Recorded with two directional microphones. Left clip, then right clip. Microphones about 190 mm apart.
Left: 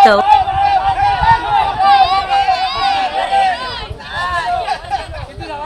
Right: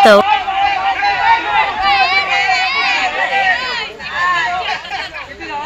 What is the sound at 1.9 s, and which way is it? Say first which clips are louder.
Run: left 1 dB; 65° left (ahead or behind).